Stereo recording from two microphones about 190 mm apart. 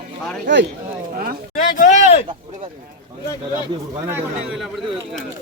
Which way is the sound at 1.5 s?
40° left (ahead or behind).